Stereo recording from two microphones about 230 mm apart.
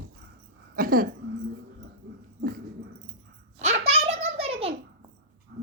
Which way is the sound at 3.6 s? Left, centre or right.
Right.